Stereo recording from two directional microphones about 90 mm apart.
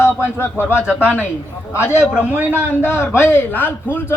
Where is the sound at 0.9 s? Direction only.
15° right (ahead or behind).